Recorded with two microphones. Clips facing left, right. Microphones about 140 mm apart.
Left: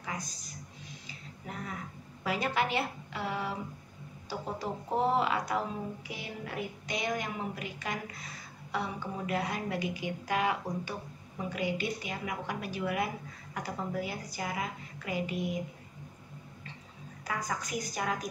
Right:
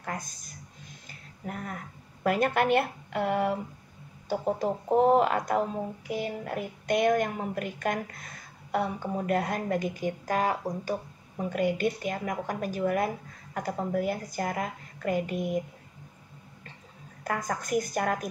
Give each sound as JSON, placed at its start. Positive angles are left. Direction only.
{"t": 0.0, "sound": "a sound", "side_deg": -55}
{"t": 2.2, "sound": "a woman's voice", "side_deg": -55}
{"t": 17.2, "sound": "a woman's voice", "side_deg": -55}